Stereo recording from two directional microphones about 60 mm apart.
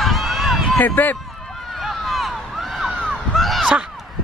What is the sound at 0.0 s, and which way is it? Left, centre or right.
Run, centre.